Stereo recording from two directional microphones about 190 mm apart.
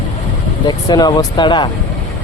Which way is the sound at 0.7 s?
20° left (ahead or behind).